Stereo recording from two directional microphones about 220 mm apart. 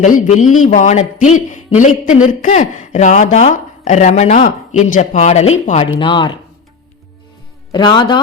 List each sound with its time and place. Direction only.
0.0 s a man's voice: 35° left (ahead or behind)
7.7 s a man's voice: 20° left (ahead or behind)